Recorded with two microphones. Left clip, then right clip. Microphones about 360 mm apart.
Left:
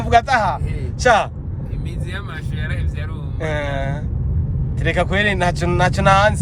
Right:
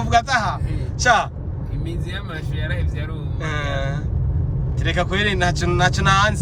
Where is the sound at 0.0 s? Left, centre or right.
Centre.